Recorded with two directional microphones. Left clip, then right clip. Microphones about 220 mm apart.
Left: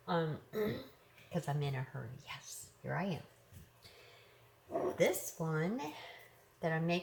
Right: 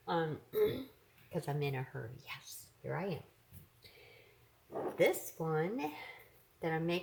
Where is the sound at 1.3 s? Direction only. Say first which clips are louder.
Right 2 dB; 40° right (ahead or behind).